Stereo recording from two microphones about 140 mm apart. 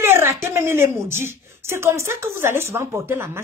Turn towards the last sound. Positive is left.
turn(degrees=-15)  # may be behind; listen again after turning